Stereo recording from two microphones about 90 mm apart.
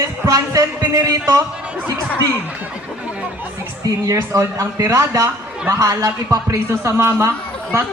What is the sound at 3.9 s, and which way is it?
A man's voice, 35° right (ahead or behind).